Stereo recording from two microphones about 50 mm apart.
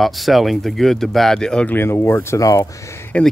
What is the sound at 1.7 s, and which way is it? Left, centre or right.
Speech, left.